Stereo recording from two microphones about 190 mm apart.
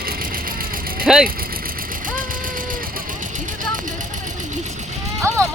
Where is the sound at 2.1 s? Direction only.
45° right (ahead or behind).